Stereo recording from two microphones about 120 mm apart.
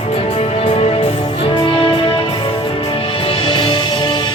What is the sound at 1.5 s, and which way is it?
Music, 45° left (ahead or behind).